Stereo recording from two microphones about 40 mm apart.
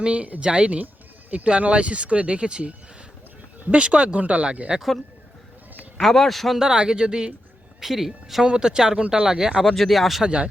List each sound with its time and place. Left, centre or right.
0.0 s speech: right
6.0 s speech: centre
6.6 s speech: centre
7.8 s a woman's voice: centre
8.4 s a woman's voice: centre
9.2 s a woman's voice: centre
9.7 s speech: centre
10.2 s speech: right